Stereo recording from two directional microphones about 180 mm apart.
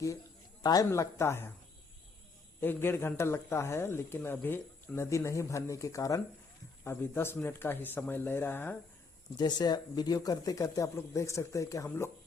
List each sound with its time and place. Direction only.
0.6 s speech: 20° left (ahead or behind)
2.6 s speech: 10° left (ahead or behind)
9.4 s speech: 25° left (ahead or behind)